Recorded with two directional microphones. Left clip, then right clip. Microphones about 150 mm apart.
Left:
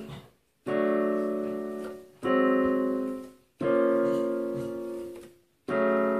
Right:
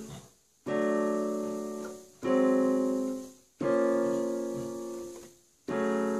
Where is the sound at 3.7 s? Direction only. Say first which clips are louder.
Left 3 dB; 15° right (ahead or behind).